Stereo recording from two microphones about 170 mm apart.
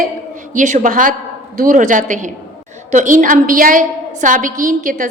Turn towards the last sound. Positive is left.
turn(degrees=-55)  # may be behind; listen again after turning